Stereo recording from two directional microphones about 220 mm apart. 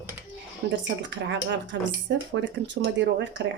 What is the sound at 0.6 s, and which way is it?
Speech, 55° right (ahead or behind).